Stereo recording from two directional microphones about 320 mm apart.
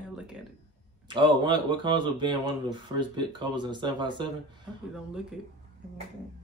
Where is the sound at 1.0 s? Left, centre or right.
Centre.